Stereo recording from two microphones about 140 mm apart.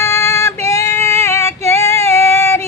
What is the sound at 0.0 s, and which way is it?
Female singing, 20° left (ahead or behind).